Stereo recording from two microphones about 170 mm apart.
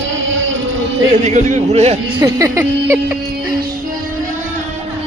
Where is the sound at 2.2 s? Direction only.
20° right (ahead or behind).